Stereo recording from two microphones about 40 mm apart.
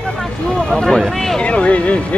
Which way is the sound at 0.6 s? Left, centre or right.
Left.